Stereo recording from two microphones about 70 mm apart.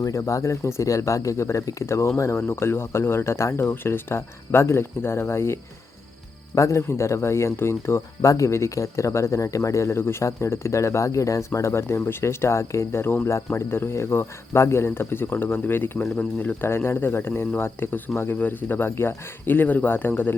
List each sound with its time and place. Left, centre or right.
0.0 s speech: left
16.1 s speech: centre
16.6 s speech: left